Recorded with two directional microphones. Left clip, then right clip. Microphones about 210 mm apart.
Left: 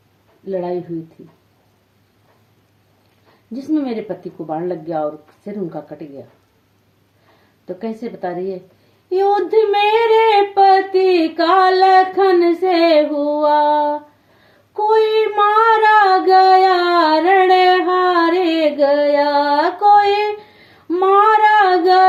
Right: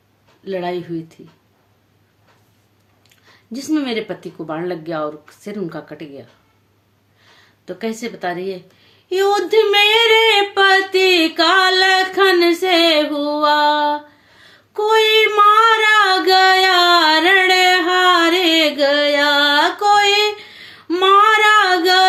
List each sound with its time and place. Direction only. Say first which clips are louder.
0.4 s speech: left 1 dB; 20° right (ahead or behind)
3.5 s speech: even; 20° right (ahead or behind)
7.8 s speech: right 2 dB; 20° right (ahead or behind)
14.7 s a sound: right 1 dB; 25° right (ahead or behind)
15.8 s speech: left 2 dB; 15° right (ahead or behind)
16.6 s music: right 1 dB; 20° right (ahead or behind)
20.8 s female singing: right 1 dB; 20° right (ahead or behind)